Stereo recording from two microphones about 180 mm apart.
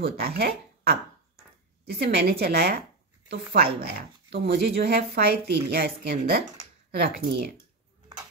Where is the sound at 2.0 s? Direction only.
65° right (ahead or behind).